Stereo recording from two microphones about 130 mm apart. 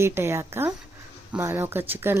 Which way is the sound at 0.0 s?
20° right (ahead or behind).